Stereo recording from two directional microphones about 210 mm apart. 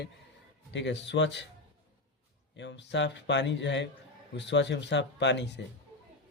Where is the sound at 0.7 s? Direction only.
55° left (ahead or behind).